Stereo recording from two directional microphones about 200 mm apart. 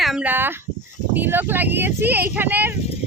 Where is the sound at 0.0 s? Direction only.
5° right (ahead or behind).